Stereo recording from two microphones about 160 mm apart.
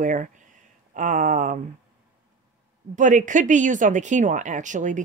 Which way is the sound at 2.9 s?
50° right (ahead or behind).